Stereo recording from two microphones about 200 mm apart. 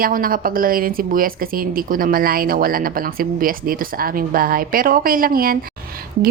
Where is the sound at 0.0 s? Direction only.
45° right (ahead or behind).